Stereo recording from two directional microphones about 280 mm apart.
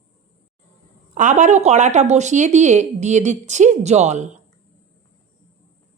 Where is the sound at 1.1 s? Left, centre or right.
Right.